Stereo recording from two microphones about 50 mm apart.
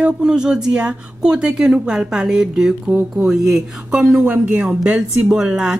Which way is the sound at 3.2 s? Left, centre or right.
Centre.